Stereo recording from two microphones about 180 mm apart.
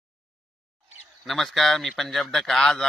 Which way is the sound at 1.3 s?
Centre (ahead or behind).